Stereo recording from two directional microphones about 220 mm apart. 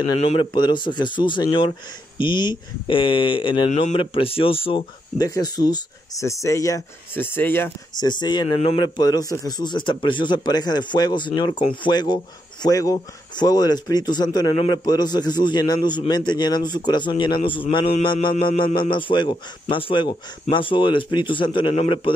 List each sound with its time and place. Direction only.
0.0 s speech: 25° left (ahead or behind)